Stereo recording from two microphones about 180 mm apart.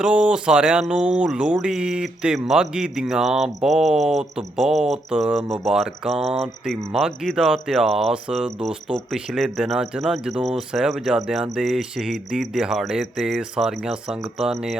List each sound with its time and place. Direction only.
0.0 s speech: 5° right (ahead or behind)